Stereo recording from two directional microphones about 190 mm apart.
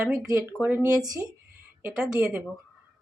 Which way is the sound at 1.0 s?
15° right (ahead or behind).